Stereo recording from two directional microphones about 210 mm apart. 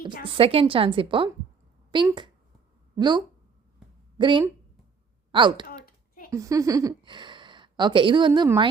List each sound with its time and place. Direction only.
0.3 s a woman's voice: 25° right (ahead or behind)
5.8 s computer keyboard: 45° left (ahead or behind)
6.3 s speech: 15° right (ahead or behind)